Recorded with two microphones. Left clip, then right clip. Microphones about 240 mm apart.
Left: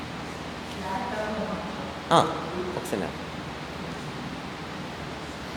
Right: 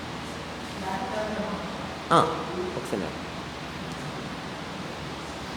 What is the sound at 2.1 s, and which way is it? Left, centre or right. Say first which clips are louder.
Speech: even; centre.